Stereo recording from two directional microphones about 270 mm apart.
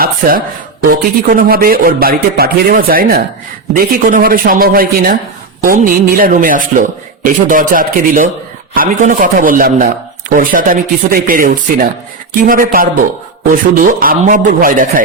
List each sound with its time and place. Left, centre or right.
0.0 s a man's voice: right